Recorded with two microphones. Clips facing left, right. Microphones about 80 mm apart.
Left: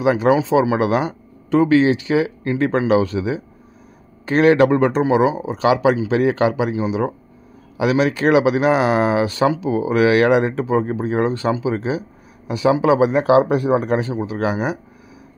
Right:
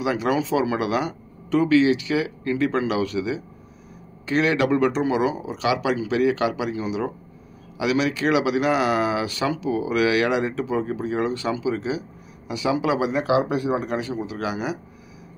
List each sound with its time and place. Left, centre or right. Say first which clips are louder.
0.0 s speech: left 7 dB; left
7.7 s a man's voice: left 5 dB; left